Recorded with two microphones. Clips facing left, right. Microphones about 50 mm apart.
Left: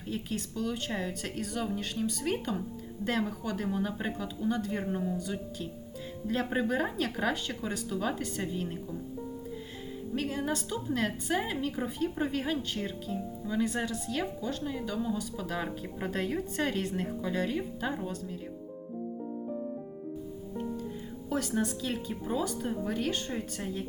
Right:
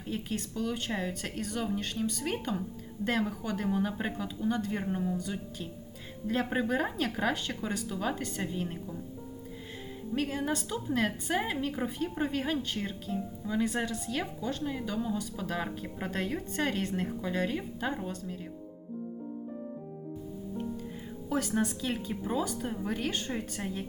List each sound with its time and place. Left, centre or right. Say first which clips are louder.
0.0 s a woman's voice: even; centre
10.2 s a woman's voice: right 1 dB; centre
21.2 s a woman's voice: right 1 dB; centre